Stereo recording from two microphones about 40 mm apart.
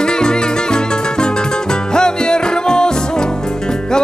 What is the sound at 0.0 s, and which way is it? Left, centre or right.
Music, centre.